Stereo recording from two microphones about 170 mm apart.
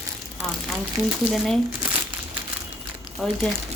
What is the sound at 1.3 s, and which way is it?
Speech, centre (ahead or behind).